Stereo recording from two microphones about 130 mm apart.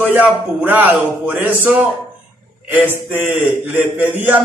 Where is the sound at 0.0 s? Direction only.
10° right (ahead or behind).